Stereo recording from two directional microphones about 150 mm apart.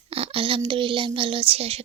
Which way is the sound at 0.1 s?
40° right (ahead or behind).